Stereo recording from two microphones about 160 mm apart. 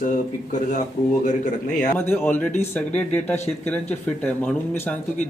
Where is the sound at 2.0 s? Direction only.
15° left (ahead or behind).